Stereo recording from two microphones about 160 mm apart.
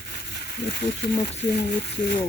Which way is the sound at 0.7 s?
90° left.